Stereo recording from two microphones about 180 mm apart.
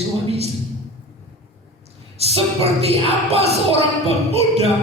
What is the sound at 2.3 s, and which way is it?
Music, 35° right (ahead or behind).